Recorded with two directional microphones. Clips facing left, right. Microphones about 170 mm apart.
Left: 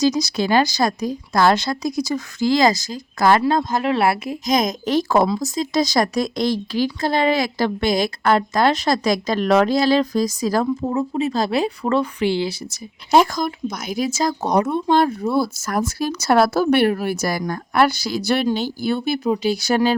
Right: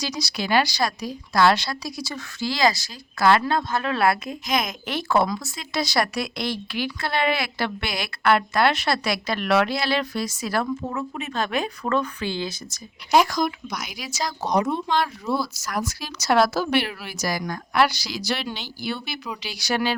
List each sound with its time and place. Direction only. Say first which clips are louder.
0.2 s a woman's voice: left 5 dB; 45° left (ahead or behind)
0.9 s speech: left 7 dB; 20° left (ahead or behind)
2.1 s a woman's voice: left 9 dB; 45° left (ahead or behind); by 4.4 s 25° left (ahead or behind)
4.4 s speech: left 7 dB; 40° left (ahead or behind)
13.7 s a woman's voice: left 9 dB; 50° left (ahead or behind)